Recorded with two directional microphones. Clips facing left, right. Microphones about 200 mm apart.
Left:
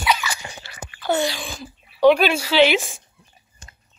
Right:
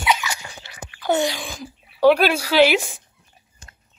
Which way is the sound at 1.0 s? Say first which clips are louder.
Right 1 dB; 15° right (ahead or behind).